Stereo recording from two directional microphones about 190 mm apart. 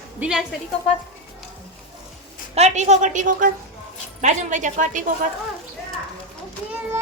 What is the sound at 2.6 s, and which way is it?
Speech, 35° right (ahead or behind).